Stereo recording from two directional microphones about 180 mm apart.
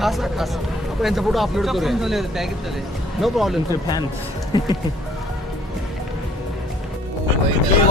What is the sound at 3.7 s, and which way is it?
Speech, 25° left (ahead or behind).